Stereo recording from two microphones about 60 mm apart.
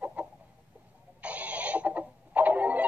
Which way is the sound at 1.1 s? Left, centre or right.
Right.